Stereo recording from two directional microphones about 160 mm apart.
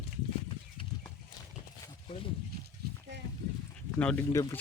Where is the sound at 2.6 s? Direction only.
90° right.